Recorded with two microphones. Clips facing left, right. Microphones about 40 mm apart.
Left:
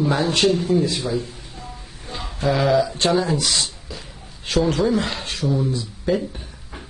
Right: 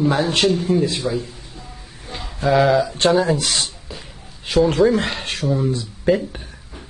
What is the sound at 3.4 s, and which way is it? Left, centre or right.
Speech, right.